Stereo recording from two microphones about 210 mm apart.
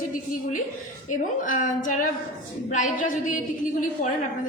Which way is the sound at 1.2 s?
40° left (ahead or behind).